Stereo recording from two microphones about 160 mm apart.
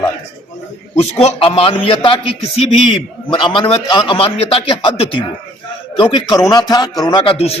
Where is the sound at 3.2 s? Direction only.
30° left (ahead or behind).